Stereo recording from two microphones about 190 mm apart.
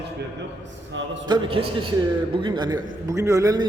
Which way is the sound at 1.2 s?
25° right (ahead or behind).